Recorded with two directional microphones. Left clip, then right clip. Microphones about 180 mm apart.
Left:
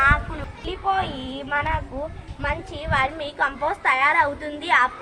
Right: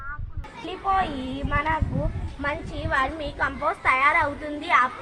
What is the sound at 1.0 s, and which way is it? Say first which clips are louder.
A woman's voice: even; 10° left (ahead or behind).